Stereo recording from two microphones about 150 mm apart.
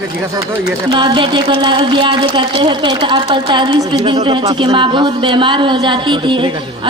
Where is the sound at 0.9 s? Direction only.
30° right (ahead or behind).